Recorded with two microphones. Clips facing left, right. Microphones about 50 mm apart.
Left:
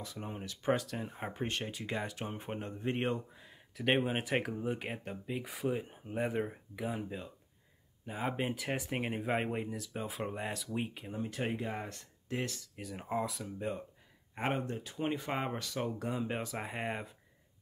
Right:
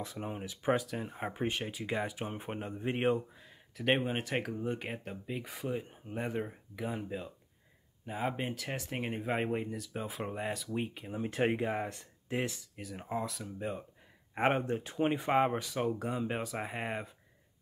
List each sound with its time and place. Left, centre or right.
0.0 s speech: right
0.3 s speech: centre
3.3 s speech: centre
11.2 s speech: right
11.6 s speech: centre
12.7 s speech: centre
14.3 s speech: right
15.0 s speech: centre